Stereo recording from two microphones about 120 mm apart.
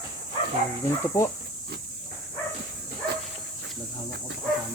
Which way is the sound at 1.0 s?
20° left (ahead or behind).